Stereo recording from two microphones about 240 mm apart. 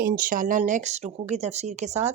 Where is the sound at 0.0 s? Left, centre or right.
Right.